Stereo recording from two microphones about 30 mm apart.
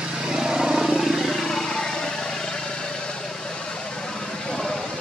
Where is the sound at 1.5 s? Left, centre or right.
Centre.